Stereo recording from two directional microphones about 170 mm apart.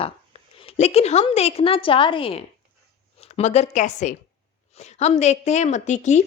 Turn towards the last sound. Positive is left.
turn(degrees=45)  # may be behind; listen again after turning